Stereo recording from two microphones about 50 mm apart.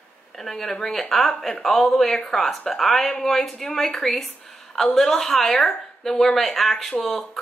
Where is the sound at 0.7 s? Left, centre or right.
Centre.